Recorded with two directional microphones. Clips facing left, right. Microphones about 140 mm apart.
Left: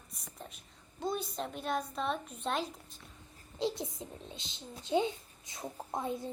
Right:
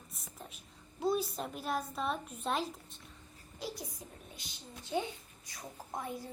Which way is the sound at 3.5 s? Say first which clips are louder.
Left 8 dB; 25° left (ahead or behind).